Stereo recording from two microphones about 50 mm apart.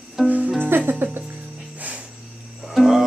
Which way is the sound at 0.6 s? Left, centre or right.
Right.